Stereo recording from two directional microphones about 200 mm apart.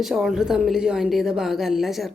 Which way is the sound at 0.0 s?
Centre (ahead or behind).